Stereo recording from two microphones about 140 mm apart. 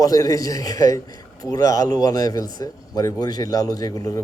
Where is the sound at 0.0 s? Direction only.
25° left (ahead or behind).